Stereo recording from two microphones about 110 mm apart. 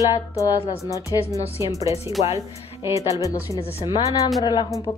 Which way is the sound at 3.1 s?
30° left (ahead or behind).